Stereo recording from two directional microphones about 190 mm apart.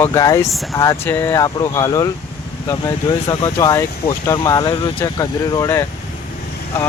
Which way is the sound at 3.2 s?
20° left (ahead or behind).